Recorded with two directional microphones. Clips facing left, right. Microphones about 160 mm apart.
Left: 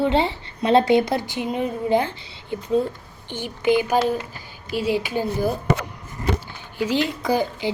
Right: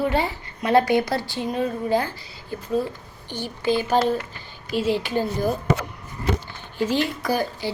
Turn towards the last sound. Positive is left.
turn(degrees=20)  # may be behind; listen again after turning